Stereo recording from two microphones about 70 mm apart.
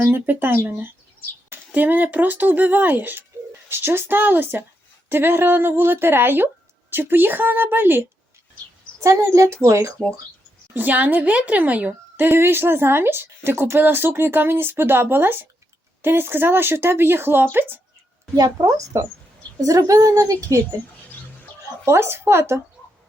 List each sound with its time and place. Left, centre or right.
0.1 s speech: right
9.0 s a woman's voice: right
10.8 s speech: right
18.3 s a woman's voice: right
21.8 s speech: right